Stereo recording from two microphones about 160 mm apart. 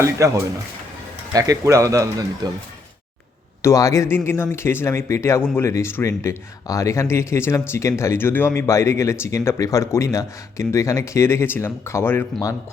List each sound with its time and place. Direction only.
0.2 s speech: 20° right (ahead or behind)
3.6 s speech: 20° left (ahead or behind)